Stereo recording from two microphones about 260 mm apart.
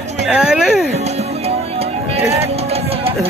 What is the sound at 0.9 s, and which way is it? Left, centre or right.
Music, right.